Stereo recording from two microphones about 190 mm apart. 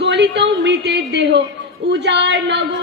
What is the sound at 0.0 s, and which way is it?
A woman's voice, 65° right (ahead or behind).